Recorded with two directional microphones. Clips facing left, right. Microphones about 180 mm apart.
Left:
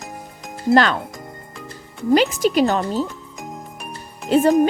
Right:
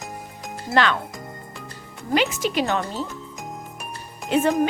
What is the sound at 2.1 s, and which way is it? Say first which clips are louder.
Speech: left 6 dB; 40° left (ahead or behind).